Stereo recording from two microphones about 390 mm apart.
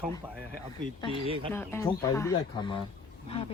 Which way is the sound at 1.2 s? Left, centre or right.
Centre.